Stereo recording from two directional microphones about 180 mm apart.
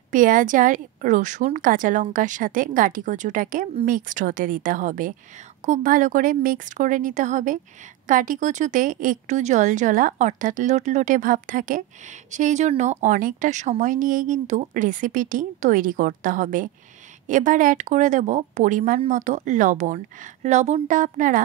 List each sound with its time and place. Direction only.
0.1 s speech: 50° right (ahead or behind)